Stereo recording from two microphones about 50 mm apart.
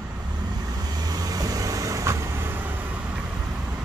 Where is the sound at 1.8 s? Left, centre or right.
Right.